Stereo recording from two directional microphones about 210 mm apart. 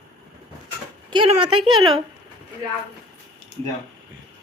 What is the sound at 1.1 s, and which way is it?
Speech, 25° right (ahead or behind).